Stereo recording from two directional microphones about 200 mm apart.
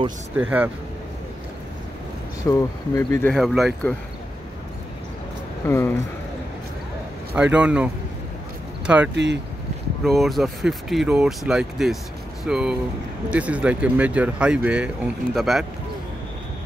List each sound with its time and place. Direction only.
0.4 s speech: 5° right (ahead or behind)
2.5 s speech: 15° left (ahead or behind)
3.3 s speech: centre (ahead or behind)
5.7 s speech: 15° left (ahead or behind)
7.5 s speech: 5° right (ahead or behind)
9.1 s speech: 60° right (ahead or behind)
10.0 s speech: centre (ahead or behind)